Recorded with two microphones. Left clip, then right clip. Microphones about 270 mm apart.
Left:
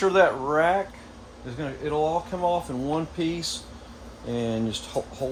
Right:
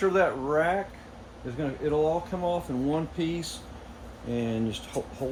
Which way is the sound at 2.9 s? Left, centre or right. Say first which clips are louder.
Left 1 dB; centre.